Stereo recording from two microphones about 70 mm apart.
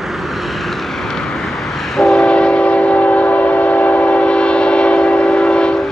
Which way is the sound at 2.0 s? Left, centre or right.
Centre.